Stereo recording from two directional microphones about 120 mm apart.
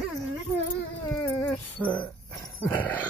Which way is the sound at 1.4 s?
10° left (ahead or behind).